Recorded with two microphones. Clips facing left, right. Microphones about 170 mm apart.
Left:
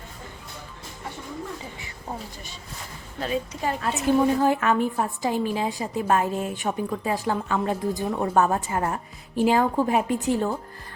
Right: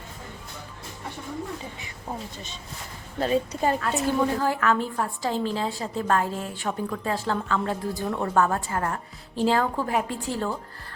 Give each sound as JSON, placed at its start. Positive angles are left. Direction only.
{"t": 3.2, "sound": "a woman's voice", "side_deg": -35}
{"t": 3.8, "sound": "a woman's voice", "side_deg": 20}